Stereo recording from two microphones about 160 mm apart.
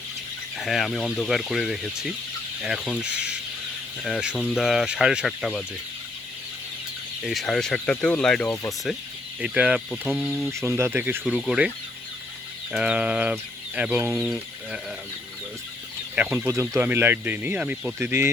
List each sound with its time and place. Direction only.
0.5 s speech: centre (ahead or behind)
7.3 s speech: centre (ahead or behind)
9.4 s speech: 5° right (ahead or behind)
10.5 s speech: 15° right (ahead or behind)
11.2 s speech: centre (ahead or behind)
12.7 s speech: 5° right (ahead or behind)
16.1 s speech: 10° right (ahead or behind)